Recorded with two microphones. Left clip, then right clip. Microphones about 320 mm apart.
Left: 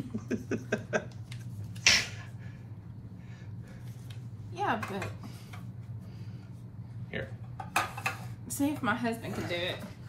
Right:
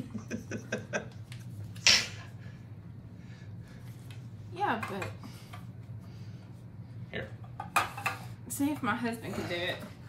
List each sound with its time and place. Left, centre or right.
0.3 s a sound: centre
4.6 s speech: centre
7.1 s dishes: centre